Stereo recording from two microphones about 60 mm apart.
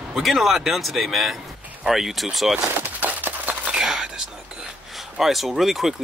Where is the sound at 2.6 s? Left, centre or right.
Right.